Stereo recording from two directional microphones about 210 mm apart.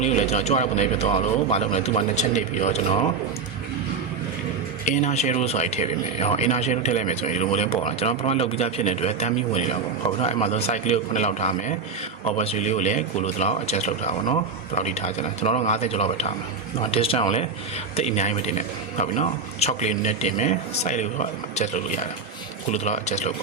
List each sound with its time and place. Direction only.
0.0 s speech: 35° left (ahead or behind)
4.9 s speech: 35° left (ahead or behind)